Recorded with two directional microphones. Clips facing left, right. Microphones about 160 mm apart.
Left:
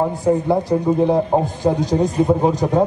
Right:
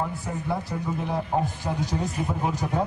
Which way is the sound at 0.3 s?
30° left (ahead or behind).